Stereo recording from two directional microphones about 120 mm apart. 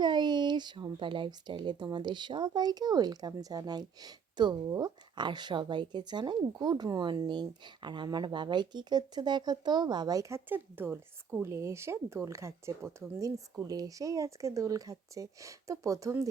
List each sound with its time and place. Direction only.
0.0 s speech: 40° right (ahead or behind)